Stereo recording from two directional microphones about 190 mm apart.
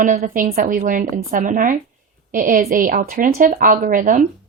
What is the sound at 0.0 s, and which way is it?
Speech, 45° right (ahead or behind).